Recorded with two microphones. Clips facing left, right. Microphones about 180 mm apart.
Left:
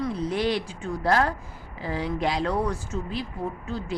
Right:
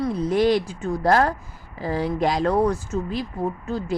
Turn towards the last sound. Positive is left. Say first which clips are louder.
# right 5 dB
turn(degrees=-45)  # may be behind; listen again after turning